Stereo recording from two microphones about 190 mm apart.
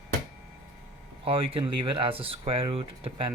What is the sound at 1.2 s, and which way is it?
Speech, 30° right (ahead or behind).